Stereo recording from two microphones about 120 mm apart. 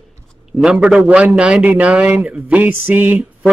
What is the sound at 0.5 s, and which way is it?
A man's voice, 5° right (ahead or behind).